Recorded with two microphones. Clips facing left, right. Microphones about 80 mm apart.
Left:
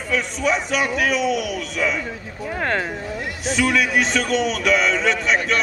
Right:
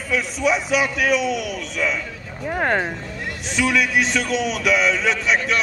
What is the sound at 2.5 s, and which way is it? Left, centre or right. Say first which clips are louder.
Speech: right 2 dB; centre.